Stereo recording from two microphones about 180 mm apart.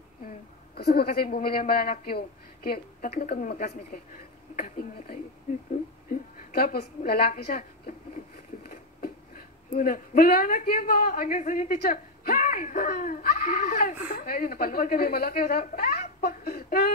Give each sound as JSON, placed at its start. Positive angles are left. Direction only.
{"t": 0.7, "sound": "a woman's voice", "side_deg": 60}
{"t": 9.8, "sound": "a man's voice", "side_deg": 45}